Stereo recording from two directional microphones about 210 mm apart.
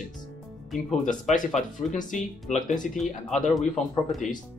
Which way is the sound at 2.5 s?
35° left (ahead or behind).